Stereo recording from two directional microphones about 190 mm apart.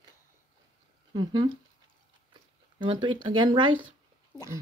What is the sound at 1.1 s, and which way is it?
Speech, 25° right (ahead or behind).